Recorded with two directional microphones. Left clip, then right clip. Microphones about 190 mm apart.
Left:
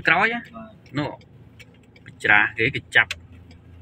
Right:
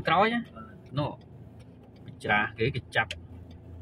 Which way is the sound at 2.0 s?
15° left (ahead or behind).